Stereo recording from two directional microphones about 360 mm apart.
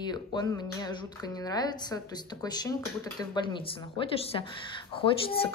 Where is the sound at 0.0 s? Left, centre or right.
Centre.